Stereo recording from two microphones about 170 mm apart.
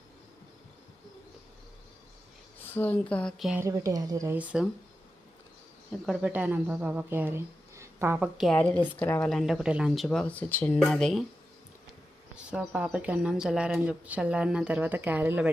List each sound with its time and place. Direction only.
2.6 s speech: 10° left (ahead or behind)
3.6 s speech: 15° right (ahead or behind)
4.4 s speech: 5° right (ahead or behind)
6.1 s speech: 10° right (ahead or behind)
9.0 s speech: 10° left (ahead or behind)
9.3 s speech: centre (ahead or behind)
12.5 s speech: 5° right (ahead or behind)